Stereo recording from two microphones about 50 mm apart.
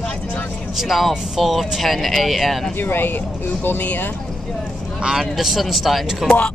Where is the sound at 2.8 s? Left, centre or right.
Left.